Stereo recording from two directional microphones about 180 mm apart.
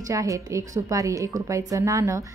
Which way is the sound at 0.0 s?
20° right (ahead or behind).